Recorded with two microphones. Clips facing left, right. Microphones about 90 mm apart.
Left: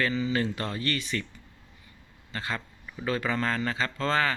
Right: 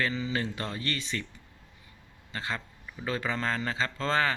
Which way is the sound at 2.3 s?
20° right (ahead or behind).